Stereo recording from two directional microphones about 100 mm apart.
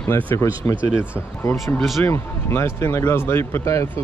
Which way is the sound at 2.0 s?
25° left (ahead or behind).